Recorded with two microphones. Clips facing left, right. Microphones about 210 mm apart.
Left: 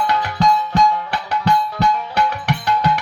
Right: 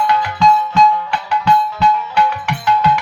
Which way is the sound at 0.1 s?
40° left (ahead or behind).